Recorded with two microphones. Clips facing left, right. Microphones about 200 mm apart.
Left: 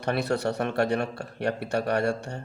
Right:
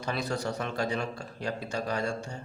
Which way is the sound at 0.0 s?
65° left (ahead or behind).